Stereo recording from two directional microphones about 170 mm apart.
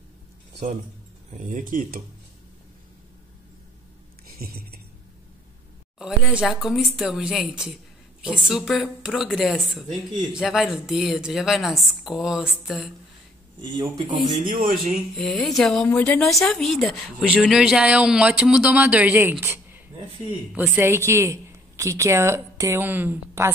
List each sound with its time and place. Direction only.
1.5 s speech: 55° right (ahead or behind)
4.4 s speech: 65° right (ahead or behind)
5.9 s speech: 5° right (ahead or behind)
13.6 s speech: 25° right (ahead or behind)
15.1 s speech: 5° left (ahead or behind)
19.4 s a sound: 15° right (ahead or behind)
20.5 s speech: 10° right (ahead or behind)